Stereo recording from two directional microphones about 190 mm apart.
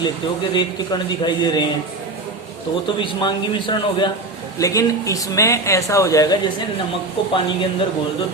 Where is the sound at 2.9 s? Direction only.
25° left (ahead or behind).